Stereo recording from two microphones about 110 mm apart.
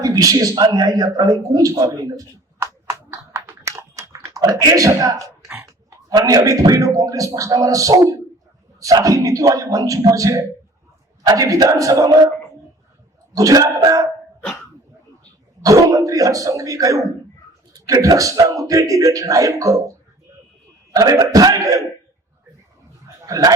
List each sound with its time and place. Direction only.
0.0 s a man's voice: 30° right (ahead or behind)
3.1 s a sound: 25° right (ahead or behind)
4.4 s a man's voice: 30° right (ahead or behind)
13.3 s a man's voice: 30° right (ahead or behind)
15.6 s a man's voice: 30° right (ahead or behind)
20.9 s a man's voice: 30° right (ahead or behind)
23.2 s a man's voice: 30° right (ahead or behind)